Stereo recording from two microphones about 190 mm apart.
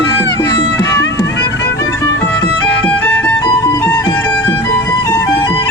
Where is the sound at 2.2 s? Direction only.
10° left (ahead or behind).